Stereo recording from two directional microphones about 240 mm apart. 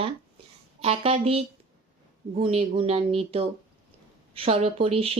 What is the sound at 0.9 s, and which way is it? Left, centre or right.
Speech, right.